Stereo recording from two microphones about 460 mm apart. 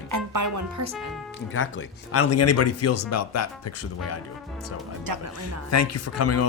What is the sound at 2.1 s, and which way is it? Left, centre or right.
Speech, left.